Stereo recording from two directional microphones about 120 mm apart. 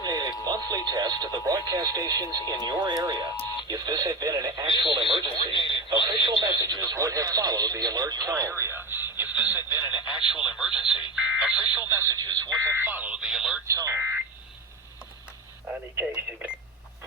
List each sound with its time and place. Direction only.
0.0 s a sound: 35° right (ahead or behind)
0.4 s speech: 35° right (ahead or behind)
4.8 s speech: 45° right (ahead or behind)
5.1 s speech: 45° left (ahead or behind)
6.1 s speech: 35° right (ahead or behind); by 9.8 s 20° right (ahead or behind)
10.5 s speech: 5° right (ahead or behind)
11.1 s a sound: 5° right (ahead or behind)
11.8 s speech: 20° right (ahead or behind)
12.2 s speech: 35° right (ahead or behind)
12.8 s speech: 15° right (ahead or behind)
13.7 s speech: 25° right (ahead or behind)
16.0 s speech: 10° right (ahead or behind)